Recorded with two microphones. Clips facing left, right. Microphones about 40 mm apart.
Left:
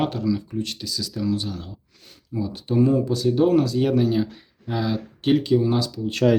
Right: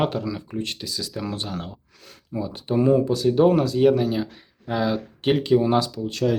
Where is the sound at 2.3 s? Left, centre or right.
Right.